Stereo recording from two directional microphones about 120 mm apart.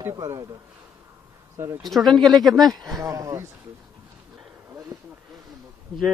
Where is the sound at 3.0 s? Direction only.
25° right (ahead or behind).